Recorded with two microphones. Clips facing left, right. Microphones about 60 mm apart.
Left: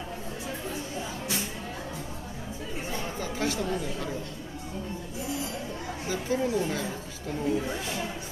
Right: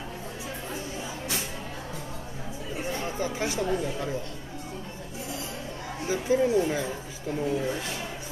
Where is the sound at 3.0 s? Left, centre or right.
Centre.